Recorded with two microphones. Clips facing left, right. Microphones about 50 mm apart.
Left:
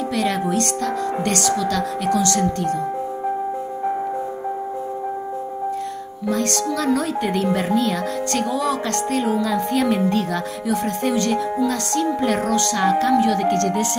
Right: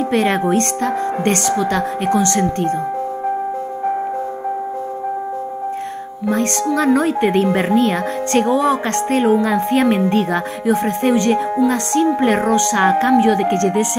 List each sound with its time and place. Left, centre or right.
0.1 s speech: right
6.2 s speech: right